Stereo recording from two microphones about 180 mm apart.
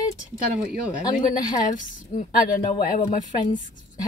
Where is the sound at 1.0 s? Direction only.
25° left (ahead or behind).